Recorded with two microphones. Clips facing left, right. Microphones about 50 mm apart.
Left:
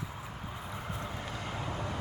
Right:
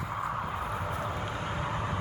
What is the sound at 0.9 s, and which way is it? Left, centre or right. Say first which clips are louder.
Vehicle: right 6 dB; right.